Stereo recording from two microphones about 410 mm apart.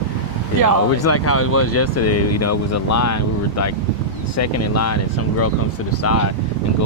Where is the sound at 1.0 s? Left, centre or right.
Left.